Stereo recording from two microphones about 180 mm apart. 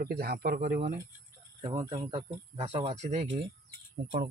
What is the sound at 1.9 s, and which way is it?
Speech, 35° right (ahead or behind).